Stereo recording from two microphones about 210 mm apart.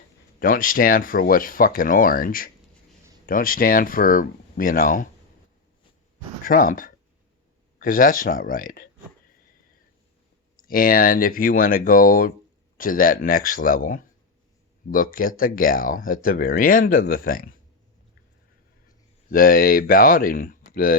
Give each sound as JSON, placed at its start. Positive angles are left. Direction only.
{"t": 0.3, "sound": "speech", "side_deg": 40}
{"t": 6.4, "sound": "speech", "side_deg": 40}
{"t": 10.6, "sound": "speech", "side_deg": 45}
{"t": 19.3, "sound": "speech", "side_deg": 45}